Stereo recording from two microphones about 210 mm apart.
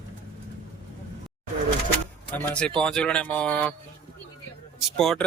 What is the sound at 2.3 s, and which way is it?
Speech, 5° left (ahead or behind).